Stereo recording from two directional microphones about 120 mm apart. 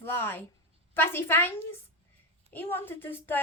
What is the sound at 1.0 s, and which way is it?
A woman's voice, 20° left (ahead or behind).